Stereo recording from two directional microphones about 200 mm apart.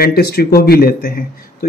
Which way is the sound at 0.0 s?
50° left (ahead or behind).